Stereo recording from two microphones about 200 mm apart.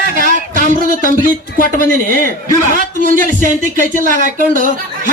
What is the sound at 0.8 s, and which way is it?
A man's voice, 40° right (ahead or behind).